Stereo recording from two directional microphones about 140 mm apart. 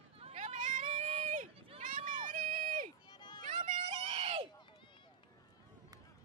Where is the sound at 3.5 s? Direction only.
65° right (ahead or behind).